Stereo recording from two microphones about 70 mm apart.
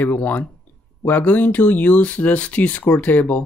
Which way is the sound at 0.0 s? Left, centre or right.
Left.